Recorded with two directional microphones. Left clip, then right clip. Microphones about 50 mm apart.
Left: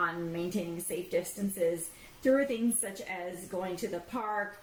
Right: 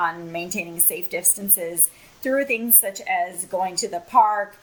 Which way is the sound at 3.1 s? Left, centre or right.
Right.